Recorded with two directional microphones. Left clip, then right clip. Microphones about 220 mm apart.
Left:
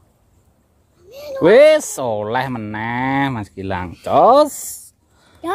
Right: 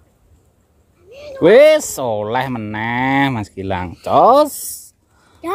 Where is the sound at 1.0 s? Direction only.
50° left (ahead or behind).